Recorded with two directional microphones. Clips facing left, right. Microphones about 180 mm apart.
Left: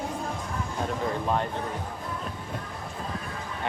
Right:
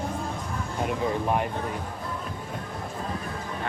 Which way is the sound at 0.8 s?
15° right (ahead or behind).